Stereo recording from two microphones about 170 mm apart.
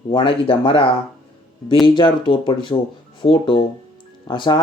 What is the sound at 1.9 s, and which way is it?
Speech, 25° left (ahead or behind).